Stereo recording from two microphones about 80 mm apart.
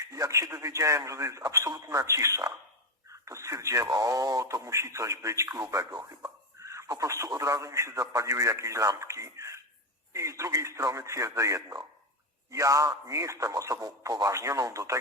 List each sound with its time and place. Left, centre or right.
0.0 s a man's voice: right
5.7 s radio: right
7.0 s a man's voice: right